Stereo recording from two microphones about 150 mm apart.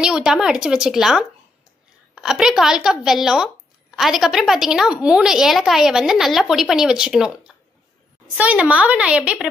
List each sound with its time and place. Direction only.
0.0 s a woman's voice: 5° right (ahead or behind)